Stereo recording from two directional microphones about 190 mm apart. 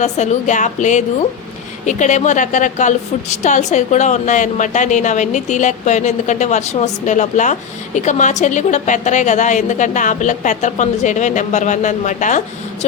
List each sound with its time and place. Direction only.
0.0 s a woman's voice: 40° left (ahead or behind)